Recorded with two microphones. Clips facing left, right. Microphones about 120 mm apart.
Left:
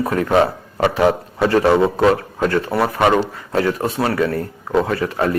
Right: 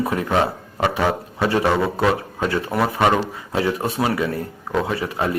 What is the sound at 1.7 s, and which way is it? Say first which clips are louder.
Speech: left 5 dB; 20° left (ahead or behind).